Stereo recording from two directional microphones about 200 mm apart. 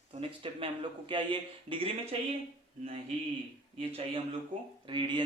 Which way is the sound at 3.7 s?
25° right (ahead or behind).